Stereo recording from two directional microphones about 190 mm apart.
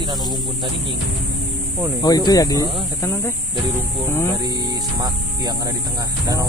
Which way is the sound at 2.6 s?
20° right (ahead or behind).